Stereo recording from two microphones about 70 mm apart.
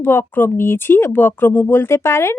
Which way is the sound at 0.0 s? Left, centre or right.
Left.